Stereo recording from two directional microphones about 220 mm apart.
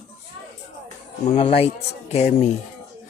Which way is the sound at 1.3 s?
25° left (ahead or behind).